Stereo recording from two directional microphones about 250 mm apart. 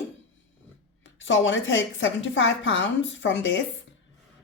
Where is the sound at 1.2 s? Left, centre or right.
Left.